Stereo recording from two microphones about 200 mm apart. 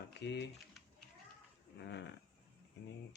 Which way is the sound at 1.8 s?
60° left (ahead or behind).